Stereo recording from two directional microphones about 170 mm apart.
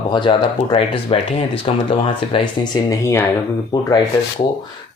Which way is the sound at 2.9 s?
15° left (ahead or behind).